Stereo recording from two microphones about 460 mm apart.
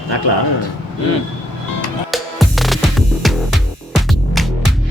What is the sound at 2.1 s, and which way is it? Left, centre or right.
Music, centre.